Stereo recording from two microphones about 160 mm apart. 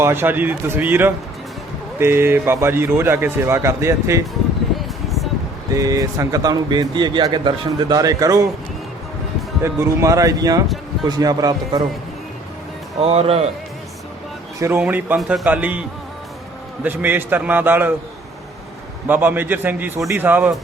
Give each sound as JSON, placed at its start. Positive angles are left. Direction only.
{"t": 0.0, "sound": "a man's voice", "side_deg": -15}
{"t": 5.0, "sound": "a sound", "side_deg": 0}
{"t": 5.7, "sound": "speech", "side_deg": -20}
{"t": 9.6, "sound": "speech", "side_deg": -15}
{"t": 13.0, "sound": "speech", "side_deg": -40}
{"t": 14.8, "sound": "a man's voice", "side_deg": -10}
{"t": 16.8, "sound": "a man's voice", "side_deg": -10}
{"t": 19.0, "sound": "a man's voice", "side_deg": -10}